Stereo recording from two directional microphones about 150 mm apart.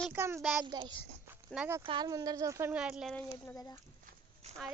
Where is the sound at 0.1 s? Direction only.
15° right (ahead or behind).